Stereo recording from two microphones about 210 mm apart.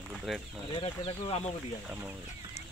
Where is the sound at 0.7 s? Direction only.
25° left (ahead or behind).